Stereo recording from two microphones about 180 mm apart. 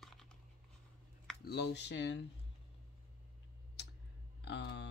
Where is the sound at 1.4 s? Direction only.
65° left (ahead or behind).